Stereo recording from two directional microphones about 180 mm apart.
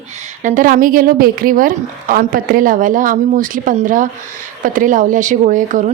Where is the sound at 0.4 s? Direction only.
45° right (ahead or behind).